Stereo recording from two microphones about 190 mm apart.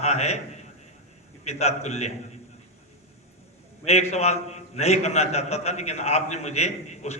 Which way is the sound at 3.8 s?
35° left (ahead or behind).